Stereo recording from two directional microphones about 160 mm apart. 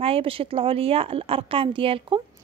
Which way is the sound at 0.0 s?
35° right (ahead or behind).